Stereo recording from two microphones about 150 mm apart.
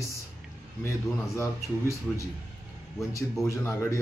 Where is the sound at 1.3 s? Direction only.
20° left (ahead or behind).